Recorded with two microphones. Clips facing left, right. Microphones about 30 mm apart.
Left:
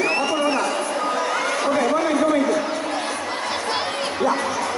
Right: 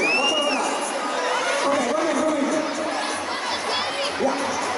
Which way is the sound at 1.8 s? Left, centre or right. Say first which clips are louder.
Left 3 dB; left.